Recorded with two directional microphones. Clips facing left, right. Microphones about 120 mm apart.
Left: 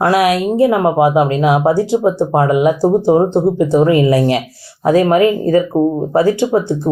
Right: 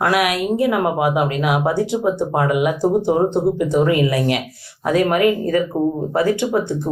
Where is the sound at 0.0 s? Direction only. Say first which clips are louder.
Left 5 dB; 30° left (ahead or behind).